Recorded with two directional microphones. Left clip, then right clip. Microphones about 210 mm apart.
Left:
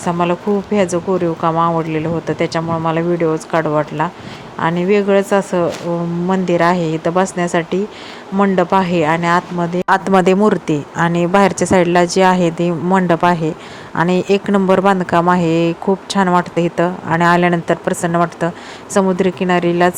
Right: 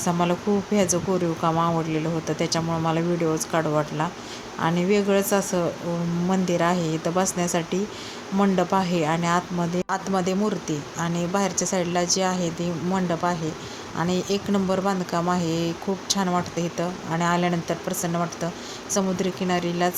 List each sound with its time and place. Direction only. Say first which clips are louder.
0.0 s speech: left 7 dB; 20° left (ahead or behind)
9.9 s speech: left 15 dB; 40° left (ahead or behind)
11.1 s speech: left 11 dB; 25° left (ahead or behind)
11.3 s speech: left 13 dB; 40° left (ahead or behind)